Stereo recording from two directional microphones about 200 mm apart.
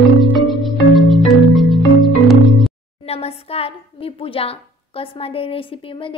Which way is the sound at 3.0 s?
30° left (ahead or behind).